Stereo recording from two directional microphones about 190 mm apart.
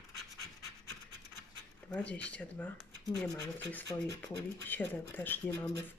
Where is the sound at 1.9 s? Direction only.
5° left (ahead or behind).